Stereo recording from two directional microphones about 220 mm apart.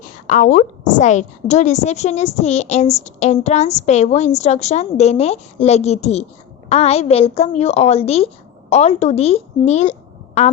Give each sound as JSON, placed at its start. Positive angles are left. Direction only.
{"t": 0.3, "sound": "a woman's voice", "side_deg": 35}